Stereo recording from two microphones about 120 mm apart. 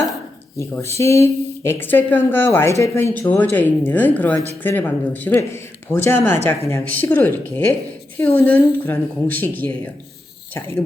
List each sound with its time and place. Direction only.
0.5 s speech: 25° left (ahead or behind)